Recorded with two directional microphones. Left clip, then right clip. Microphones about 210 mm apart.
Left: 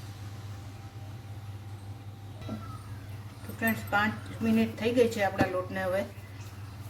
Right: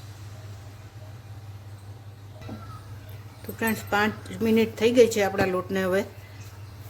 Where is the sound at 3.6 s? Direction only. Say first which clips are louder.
Right 3 dB; 55° right (ahead or behind).